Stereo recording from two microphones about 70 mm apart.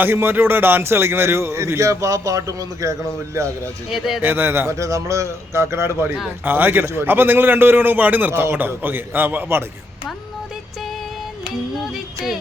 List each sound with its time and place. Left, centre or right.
0.0 s a man's voice: right
3.8 s speech: centre
4.2 s a man's voice: right
4.8 s a man's voice: right
6.4 s a man's voice: right
11.8 s music: centre